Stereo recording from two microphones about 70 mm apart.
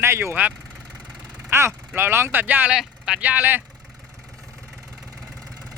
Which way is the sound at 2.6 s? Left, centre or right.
Centre.